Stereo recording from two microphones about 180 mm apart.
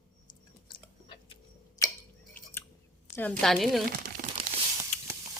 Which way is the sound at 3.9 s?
50° right (ahead or behind).